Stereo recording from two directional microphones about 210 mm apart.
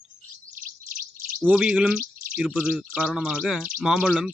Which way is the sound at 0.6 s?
40° right (ahead or behind).